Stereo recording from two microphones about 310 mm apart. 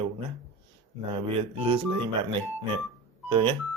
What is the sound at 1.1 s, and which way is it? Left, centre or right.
Speech, centre.